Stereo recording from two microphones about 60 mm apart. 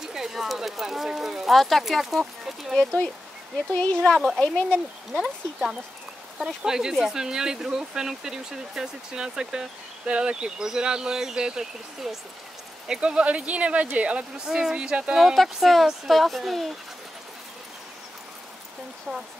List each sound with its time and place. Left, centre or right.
0.0 s speech: centre
2.8 s speech: centre
5.1 s speech: centre
15.1 s speech: centre